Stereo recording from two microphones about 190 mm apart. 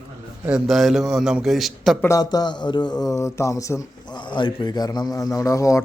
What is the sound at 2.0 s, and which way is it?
Speech, 20° left (ahead or behind).